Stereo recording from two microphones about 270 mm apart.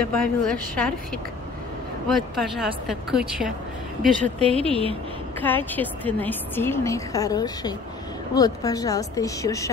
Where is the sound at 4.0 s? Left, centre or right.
Right.